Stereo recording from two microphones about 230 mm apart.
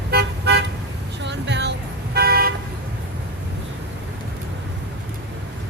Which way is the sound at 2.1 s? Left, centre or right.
Right.